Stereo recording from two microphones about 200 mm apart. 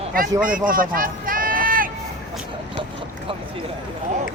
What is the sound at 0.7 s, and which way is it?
Run, 45° right (ahead or behind).